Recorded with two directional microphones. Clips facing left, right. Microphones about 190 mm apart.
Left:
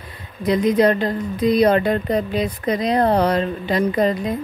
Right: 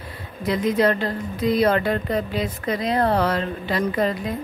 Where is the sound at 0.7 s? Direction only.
20° left (ahead or behind).